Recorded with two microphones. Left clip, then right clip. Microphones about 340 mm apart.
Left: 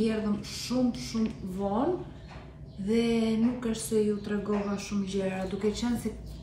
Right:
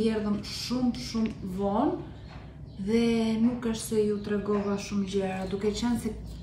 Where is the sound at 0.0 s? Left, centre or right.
Centre.